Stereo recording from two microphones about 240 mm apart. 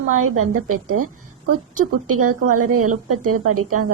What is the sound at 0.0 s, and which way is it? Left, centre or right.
Music, right.